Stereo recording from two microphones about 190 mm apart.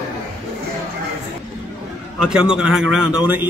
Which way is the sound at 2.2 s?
5° right (ahead or behind).